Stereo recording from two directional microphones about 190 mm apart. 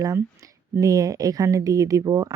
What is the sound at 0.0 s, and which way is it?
Speech, 15° right (ahead or behind).